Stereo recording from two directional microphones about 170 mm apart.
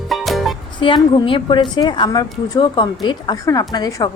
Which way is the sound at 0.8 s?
30° left (ahead or behind).